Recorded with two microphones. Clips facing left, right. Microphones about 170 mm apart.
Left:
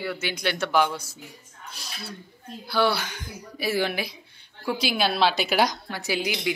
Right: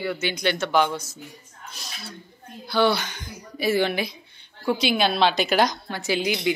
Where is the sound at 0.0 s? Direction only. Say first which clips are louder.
Right 3 dB; 5° left (ahead or behind).